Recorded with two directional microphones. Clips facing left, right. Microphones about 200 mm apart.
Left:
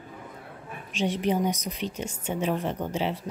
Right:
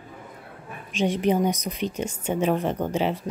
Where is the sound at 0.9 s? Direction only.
50° right (ahead or behind).